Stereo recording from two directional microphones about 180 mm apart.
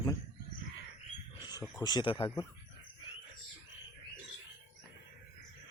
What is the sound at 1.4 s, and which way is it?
Speech, 20° left (ahead or behind).